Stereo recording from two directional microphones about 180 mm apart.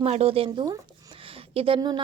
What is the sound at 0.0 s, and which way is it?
Speech, 35° right (ahead or behind).